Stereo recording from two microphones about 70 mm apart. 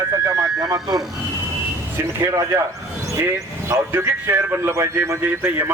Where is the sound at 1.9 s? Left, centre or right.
Right.